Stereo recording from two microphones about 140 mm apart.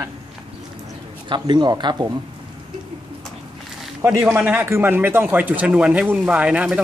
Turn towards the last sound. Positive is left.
turn(degrees=-10)  # may be behind; listen again after turning